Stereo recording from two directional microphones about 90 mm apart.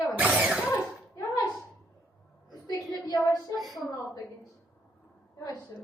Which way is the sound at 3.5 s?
Centre (ahead or behind).